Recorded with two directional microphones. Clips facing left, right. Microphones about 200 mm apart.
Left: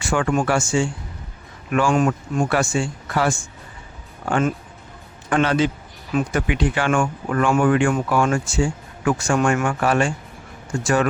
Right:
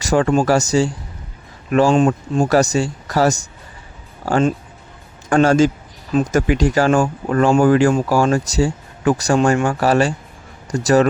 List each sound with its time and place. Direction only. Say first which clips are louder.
0.0 s speech: right 5 dB; 35° right (ahead or behind)
5.3 s a man's voice: right 6 dB; 45° right (ahead or behind)